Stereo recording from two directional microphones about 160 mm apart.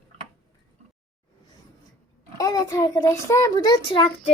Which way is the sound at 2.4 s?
25° left (ahead or behind).